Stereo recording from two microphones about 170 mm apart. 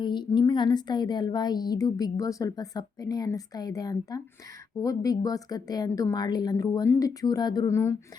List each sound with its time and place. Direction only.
0.0 s a woman's voice: 25° left (ahead or behind)